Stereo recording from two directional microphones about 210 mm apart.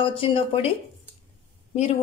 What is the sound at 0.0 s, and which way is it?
Speech, 25° left (ahead or behind).